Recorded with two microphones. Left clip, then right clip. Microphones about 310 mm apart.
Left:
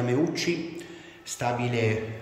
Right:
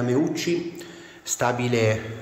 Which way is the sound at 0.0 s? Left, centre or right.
Centre.